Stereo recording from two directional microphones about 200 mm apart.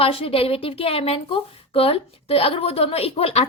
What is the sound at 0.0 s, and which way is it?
A woman's voice, 30° left (ahead or behind).